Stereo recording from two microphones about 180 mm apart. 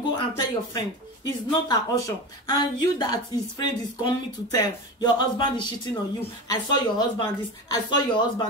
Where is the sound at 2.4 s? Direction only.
25° left (ahead or behind).